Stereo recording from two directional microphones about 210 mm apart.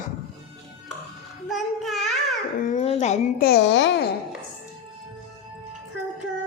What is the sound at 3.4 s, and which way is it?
Speech, 50° left (ahead or behind).